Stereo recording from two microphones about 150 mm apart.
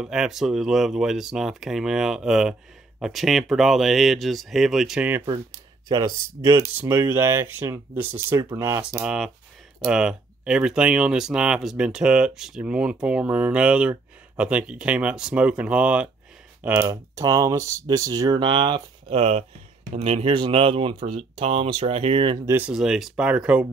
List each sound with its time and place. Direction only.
0.0 s speech: 5° right (ahead or behind)
5.9 s speech: 25° right (ahead or behind)
9.0 s speech: 5° right (ahead or behind); by 22.4 s 40° right (ahead or behind)
22.5 s speech: 10° right (ahead or behind)